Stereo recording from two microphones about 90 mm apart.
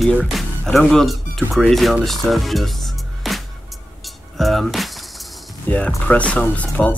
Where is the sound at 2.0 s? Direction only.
Centre (ahead or behind).